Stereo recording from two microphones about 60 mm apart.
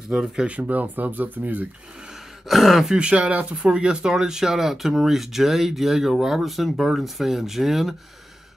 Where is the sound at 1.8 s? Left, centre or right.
Centre.